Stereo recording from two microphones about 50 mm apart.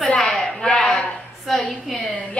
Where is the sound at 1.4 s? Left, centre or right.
Centre.